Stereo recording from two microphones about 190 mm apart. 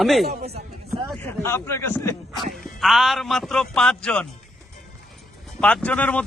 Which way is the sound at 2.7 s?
Centre (ahead or behind).